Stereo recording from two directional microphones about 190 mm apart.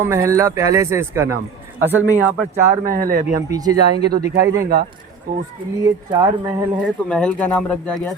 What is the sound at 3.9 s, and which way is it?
Speech, 55° right (ahead or behind).